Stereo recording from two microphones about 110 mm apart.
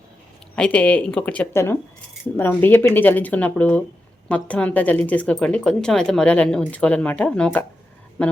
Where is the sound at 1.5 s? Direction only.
25° left (ahead or behind).